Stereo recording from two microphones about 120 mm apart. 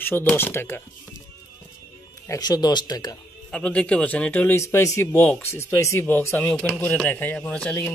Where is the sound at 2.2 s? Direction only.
30° left (ahead or behind).